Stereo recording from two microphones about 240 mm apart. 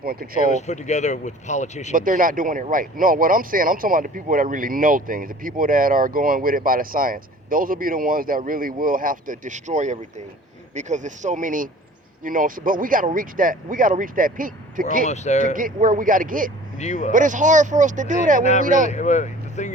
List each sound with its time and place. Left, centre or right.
0.0 s speech: right
0.5 s speech: left
1.9 s speech: right
15.0 s speech: left
15.5 s speech: right
16.7 s speech: left
17.1 s speech: right
18.9 s speech: left